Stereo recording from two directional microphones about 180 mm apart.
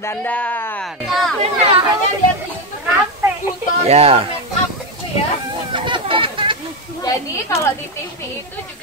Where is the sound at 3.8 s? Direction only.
35° right (ahead or behind).